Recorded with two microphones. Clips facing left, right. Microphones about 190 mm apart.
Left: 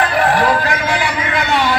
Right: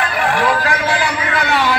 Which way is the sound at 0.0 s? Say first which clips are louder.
Left 3 dB; 40° left (ahead or behind).